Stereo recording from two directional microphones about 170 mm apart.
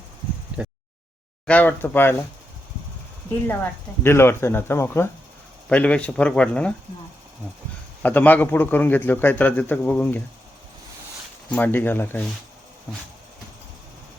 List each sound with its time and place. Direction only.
1.5 s a man's voice: 10° left (ahead or behind)
3.4 s a man's voice: 10° left (ahead or behind)
8.0 s a man's voice: 10° left (ahead or behind)
11.5 s a man's voice: 10° left (ahead or behind)